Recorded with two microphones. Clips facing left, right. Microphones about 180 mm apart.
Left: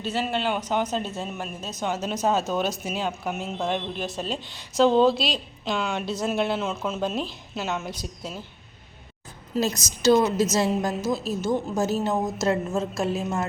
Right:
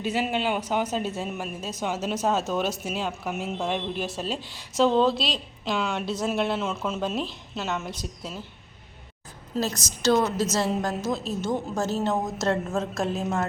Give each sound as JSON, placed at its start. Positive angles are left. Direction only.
{"t": 0.0, "sound": "speech", "side_deg": -10}
{"t": 9.6, "sound": "a woman's voice", "side_deg": 15}